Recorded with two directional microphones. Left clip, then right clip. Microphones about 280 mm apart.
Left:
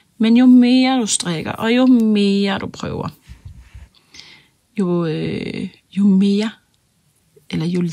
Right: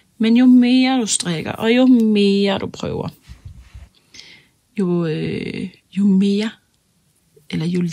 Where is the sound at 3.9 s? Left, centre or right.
Centre.